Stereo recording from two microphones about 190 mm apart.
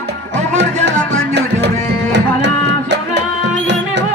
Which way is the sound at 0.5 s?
65° right (ahead or behind).